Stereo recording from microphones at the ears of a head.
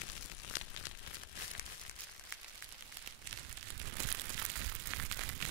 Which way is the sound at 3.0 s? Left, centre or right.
Right.